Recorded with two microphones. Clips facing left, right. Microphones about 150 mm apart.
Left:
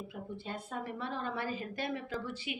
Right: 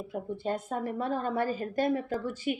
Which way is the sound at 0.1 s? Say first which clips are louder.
Right 9 dB; 45° right (ahead or behind).